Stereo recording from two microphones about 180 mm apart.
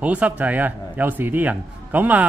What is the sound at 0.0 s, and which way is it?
Speech, 10° right (ahead or behind).